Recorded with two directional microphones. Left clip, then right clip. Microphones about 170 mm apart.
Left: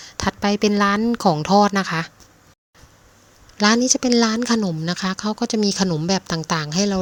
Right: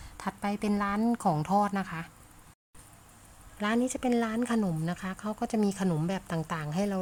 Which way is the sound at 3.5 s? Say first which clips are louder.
Left 13 dB; 35° left (ahead or behind).